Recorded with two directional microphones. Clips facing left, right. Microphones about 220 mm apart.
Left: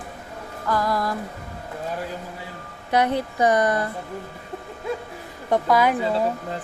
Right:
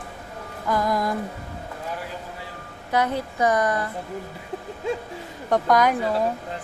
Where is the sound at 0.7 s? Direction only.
20° right (ahead or behind).